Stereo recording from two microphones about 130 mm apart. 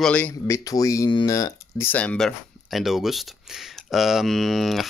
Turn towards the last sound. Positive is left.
turn(degrees=0)  # may be behind; listen again after turning